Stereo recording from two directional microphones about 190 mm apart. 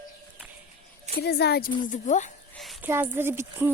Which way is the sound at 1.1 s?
60° left (ahead or behind).